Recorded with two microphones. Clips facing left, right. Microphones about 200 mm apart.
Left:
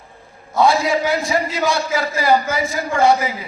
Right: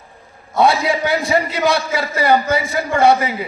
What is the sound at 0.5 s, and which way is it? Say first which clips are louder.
A man's voice: even; 65° right (ahead or behind).